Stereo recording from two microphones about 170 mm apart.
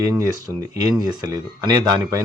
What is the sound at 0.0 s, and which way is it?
Speech, 20° right (ahead or behind).